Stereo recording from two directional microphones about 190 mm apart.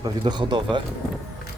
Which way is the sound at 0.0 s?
25° right (ahead or behind).